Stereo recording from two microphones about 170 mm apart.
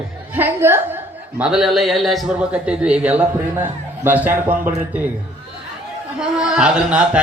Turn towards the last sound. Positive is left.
turn(degrees=-5)  # may be behind; listen again after turning